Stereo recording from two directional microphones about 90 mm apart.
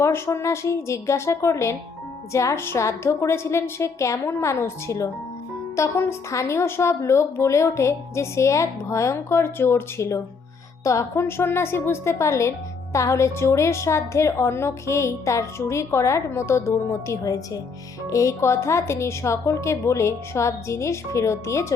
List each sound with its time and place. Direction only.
0.0 s a woman's voice: 30° left (ahead or behind)